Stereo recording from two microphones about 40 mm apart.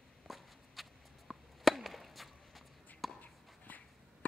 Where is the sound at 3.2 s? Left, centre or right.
Left.